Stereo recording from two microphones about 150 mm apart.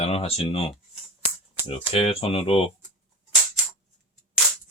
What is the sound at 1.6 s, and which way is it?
Speech, 40° left (ahead or behind).